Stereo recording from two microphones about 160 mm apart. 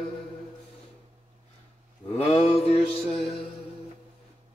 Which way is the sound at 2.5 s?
40° left (ahead or behind).